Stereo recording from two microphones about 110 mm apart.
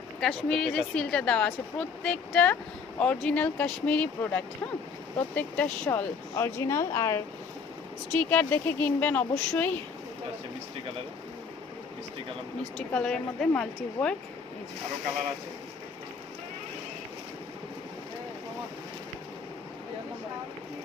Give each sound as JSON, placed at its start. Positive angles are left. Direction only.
{"t": 0.2, "sound": "speech", "side_deg": 5}
{"t": 12.9, "sound": "speech", "side_deg": 10}